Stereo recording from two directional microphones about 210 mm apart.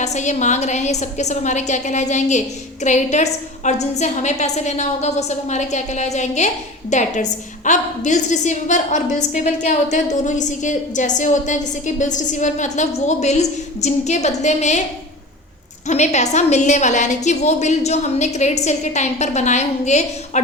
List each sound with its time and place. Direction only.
0.0 s a woman's voice: 35° left (ahead or behind)
15.9 s a woman's voice: 35° left (ahead or behind)